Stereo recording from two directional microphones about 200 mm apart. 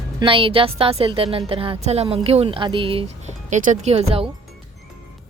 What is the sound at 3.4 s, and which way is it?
Speech, 40° right (ahead or behind).